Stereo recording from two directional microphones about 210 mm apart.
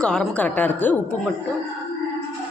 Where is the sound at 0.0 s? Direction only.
5° left (ahead or behind).